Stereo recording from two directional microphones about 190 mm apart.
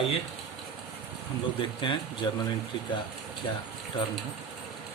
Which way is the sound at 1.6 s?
25° left (ahead or behind).